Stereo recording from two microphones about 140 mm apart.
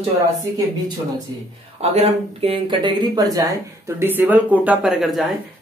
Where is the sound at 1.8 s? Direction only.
50° right (ahead or behind); by 3.4 s 25° right (ahead or behind).